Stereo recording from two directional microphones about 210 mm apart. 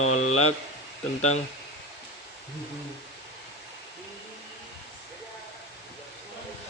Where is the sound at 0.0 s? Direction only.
30° left (ahead or behind).